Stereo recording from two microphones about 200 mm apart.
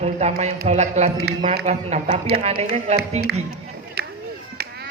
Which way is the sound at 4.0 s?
55° right (ahead or behind).